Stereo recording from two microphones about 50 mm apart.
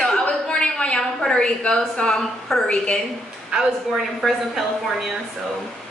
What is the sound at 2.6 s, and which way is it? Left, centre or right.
Speech, left.